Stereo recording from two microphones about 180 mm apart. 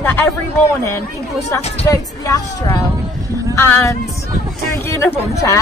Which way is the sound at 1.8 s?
20° left (ahead or behind).